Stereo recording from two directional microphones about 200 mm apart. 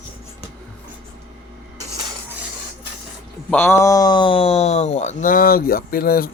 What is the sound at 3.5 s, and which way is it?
Speech, 10° left (ahead or behind).